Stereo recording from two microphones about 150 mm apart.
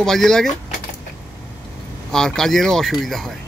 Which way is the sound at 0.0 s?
Centre (ahead or behind).